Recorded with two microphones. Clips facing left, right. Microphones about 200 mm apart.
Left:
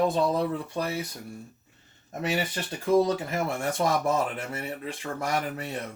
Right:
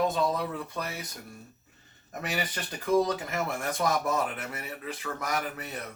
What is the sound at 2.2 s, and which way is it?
Speech, 30° left (ahead or behind).